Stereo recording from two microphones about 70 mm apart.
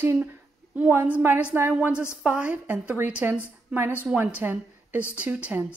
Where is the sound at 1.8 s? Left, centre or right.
Centre.